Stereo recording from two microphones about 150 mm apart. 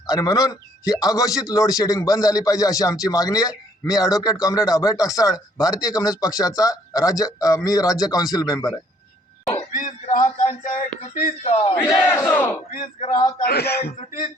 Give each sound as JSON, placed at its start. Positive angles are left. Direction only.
{"t": 0.1, "sound": "a man's voice", "side_deg": 25}
{"t": 9.7, "sound": "a sound", "side_deg": 60}
{"t": 11.0, "sound": "speech", "side_deg": 50}
{"t": 11.8, "sound": "battle cry", "side_deg": 15}
{"t": 13.4, "sound": "speech", "side_deg": 90}